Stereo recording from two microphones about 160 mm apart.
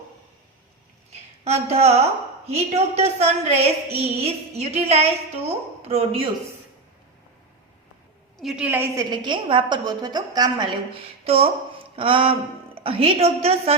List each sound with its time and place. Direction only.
1.5 s a woman's voice: 40° right (ahead or behind)
8.4 s a woman's voice: 5° right (ahead or behind)
9.0 s a woman's voice: 30° right (ahead or behind)